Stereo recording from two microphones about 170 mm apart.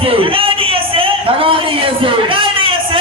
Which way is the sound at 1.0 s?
30° right (ahead or behind).